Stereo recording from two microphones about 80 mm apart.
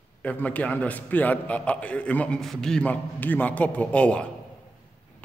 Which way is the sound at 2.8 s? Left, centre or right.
Left.